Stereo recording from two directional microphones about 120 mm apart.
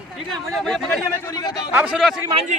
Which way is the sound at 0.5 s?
Centre (ahead or behind).